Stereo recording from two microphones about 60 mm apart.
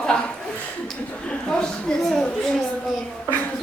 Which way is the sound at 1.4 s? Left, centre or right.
Centre.